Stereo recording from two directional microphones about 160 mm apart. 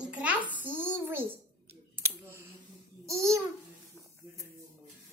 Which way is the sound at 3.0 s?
20° right (ahead or behind).